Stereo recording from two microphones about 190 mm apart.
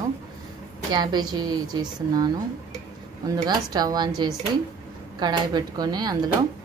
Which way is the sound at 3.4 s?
20° right (ahead or behind).